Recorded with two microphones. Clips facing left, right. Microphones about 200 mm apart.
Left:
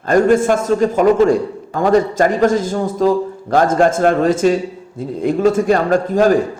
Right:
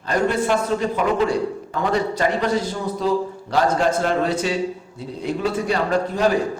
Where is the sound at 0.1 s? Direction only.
45° left (ahead or behind).